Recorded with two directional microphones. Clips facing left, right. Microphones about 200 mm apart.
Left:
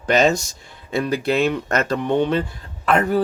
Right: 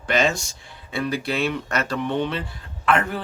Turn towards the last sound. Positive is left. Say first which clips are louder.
# left 3 dB
turn(degrees=40)  # may be behind; listen again after turning